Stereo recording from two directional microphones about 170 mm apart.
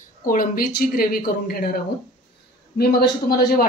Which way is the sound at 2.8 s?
65° left (ahead or behind).